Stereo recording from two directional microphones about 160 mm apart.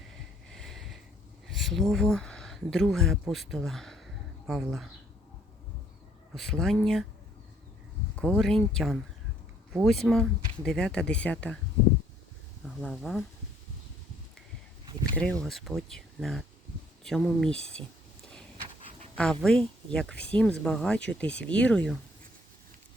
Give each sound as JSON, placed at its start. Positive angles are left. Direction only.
{"t": 0.5, "sound": "a sound", "side_deg": 0}
{"t": 1.5, "sound": "speech", "side_deg": 0}
{"t": 6.3, "sound": "speech", "side_deg": 5}
{"t": 8.1, "sound": "speech", "side_deg": 5}
{"t": 12.6, "sound": "speech", "side_deg": 0}
{"t": 15.1, "sound": "speech", "side_deg": 5}
{"t": 18.5, "sound": "a sound", "side_deg": -35}
{"t": 19.1, "sound": "speech", "side_deg": 5}